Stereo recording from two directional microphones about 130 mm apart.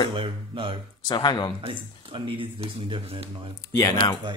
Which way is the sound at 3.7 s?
25° left (ahead or behind).